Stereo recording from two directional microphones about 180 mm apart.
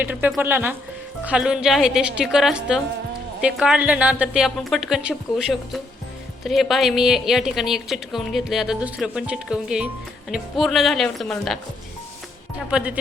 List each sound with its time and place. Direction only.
0.0 s a woman's voice: 10° right (ahead or behind)
12.7 s a woman's voice: 5° right (ahead or behind)